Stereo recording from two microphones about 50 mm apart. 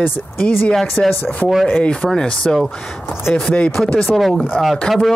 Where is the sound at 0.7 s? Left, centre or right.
Centre.